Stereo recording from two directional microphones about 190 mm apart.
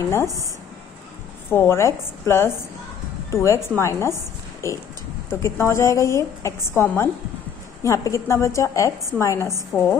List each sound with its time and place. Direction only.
1.5 s a woman's voice: 10° left (ahead or behind)